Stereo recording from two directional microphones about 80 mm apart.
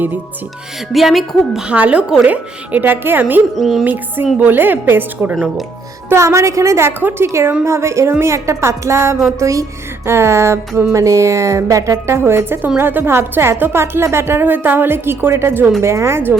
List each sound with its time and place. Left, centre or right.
0.9 s a woman's voice: centre
1.6 s a woman's voice: centre
3.5 s a woman's voice: centre
4.4 s a woman's voice: right
6.1 s a woman's voice: right